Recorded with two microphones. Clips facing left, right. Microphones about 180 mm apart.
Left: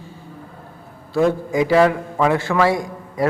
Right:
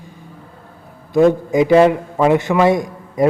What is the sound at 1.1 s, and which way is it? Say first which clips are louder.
A man's voice: right 5 dB; 20° right (ahead or behind).